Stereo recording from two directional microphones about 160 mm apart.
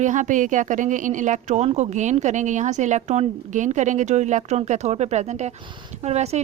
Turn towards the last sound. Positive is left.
turn(degrees=-40)  # may be behind; listen again after turning